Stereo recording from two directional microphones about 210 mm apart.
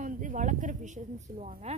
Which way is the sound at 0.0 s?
40° right (ahead or behind).